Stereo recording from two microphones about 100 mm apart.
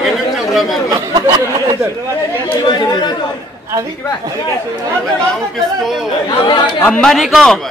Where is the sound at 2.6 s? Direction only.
45° left (ahead or behind).